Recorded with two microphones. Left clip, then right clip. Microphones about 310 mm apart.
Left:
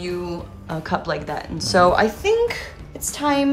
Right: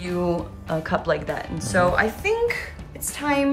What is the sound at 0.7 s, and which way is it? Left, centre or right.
A woman's voice, centre.